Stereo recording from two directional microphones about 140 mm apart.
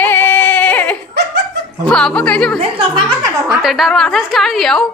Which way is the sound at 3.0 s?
25° right (ahead or behind).